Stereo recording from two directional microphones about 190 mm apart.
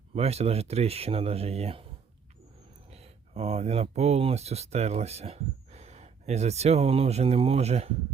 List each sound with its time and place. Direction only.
0.1 s speech: 35° right (ahead or behind)
2.9 s speech: 35° right (ahead or behind)